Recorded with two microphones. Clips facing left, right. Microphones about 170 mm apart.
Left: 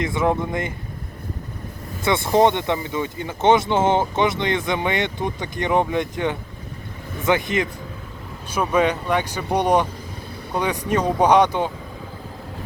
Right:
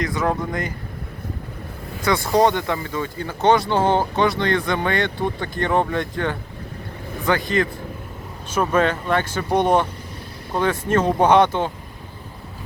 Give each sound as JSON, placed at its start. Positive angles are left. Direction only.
{"t": 0.0, "sound": "speech", "side_deg": 25}
{"t": 2.0, "sound": "speech", "side_deg": 25}
{"t": 8.7, "sound": "speech", "side_deg": 15}